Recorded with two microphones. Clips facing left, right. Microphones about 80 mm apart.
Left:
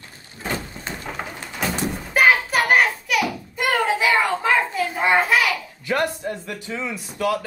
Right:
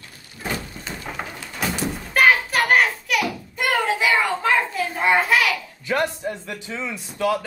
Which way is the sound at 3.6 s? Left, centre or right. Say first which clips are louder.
Left 1 dB; centre.